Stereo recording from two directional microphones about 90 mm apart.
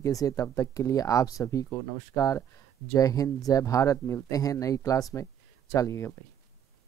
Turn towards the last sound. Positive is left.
turn(degrees=35)  # may be behind; listen again after turning